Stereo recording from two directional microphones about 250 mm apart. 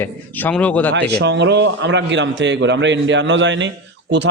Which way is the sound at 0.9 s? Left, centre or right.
Right.